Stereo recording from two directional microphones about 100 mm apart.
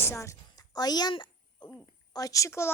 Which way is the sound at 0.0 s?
30° left (ahead or behind).